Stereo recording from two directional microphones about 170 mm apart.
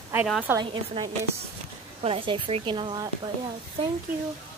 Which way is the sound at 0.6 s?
30° right (ahead or behind).